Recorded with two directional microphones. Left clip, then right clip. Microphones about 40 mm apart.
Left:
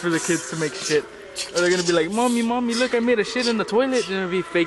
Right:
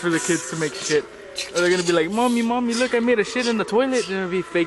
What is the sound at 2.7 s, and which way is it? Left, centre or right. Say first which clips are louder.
Speech: even; right.